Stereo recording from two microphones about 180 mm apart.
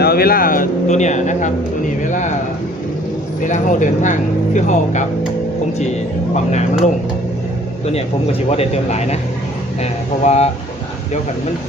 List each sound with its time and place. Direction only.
0.0 s speech: 60° left (ahead or behind); by 2.3 s 45° left (ahead or behind)
3.4 s speech: 45° left (ahead or behind)
6.3 s speech: 40° left (ahead or behind)
7.9 s speech: 35° left (ahead or behind)